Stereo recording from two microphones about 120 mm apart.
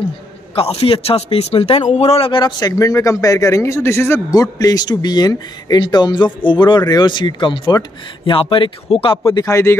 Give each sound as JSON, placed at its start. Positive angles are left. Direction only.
{"t": 0.6, "sound": "a man's voice", "side_deg": 55}
{"t": 9.3, "sound": "speech", "side_deg": 30}